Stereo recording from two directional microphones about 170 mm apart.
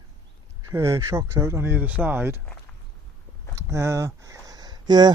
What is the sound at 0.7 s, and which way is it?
Speech, 15° right (ahead or behind).